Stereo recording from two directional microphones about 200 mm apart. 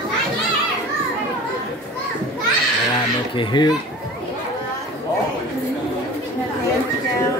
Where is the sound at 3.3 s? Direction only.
20° left (ahead or behind).